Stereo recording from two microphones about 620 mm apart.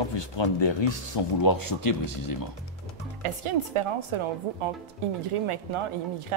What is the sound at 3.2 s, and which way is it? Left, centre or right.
Speech, right.